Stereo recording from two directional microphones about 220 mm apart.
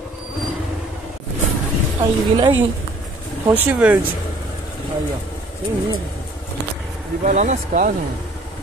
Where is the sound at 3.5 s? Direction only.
10° right (ahead or behind).